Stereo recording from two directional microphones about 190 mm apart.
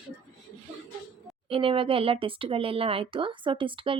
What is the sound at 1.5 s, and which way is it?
Speech, 30° right (ahead or behind).